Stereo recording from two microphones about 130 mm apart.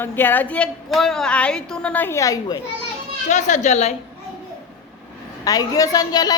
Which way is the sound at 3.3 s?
65° left (ahead or behind).